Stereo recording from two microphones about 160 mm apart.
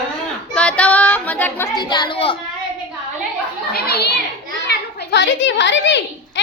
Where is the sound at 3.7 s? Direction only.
75° left (ahead or behind).